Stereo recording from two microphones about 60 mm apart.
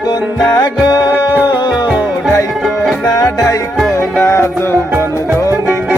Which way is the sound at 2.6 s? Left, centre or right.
Centre.